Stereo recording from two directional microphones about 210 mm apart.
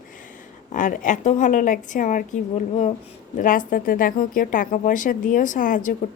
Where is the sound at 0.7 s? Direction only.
40° left (ahead or behind).